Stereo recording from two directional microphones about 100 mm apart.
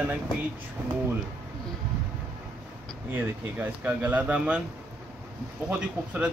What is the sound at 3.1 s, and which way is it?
Speech, 15° right (ahead or behind).